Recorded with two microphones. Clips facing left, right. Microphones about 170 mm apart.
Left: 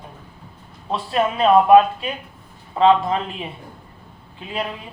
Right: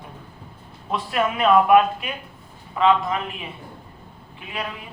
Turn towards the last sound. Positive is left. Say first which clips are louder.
# left 4 dB
turn(degrees=30)  # may be behind; listen again after turning